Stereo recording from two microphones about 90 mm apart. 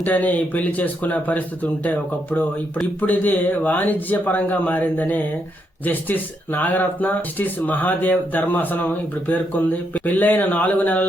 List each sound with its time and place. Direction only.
0.0 s speech: 20° left (ahead or behind)